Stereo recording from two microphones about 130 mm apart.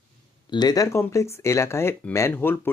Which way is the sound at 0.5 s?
30° left (ahead or behind).